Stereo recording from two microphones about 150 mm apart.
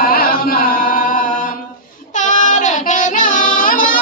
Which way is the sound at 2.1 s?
55° left (ahead or behind).